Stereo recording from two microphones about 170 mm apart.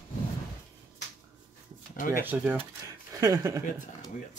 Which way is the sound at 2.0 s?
55° left (ahead or behind).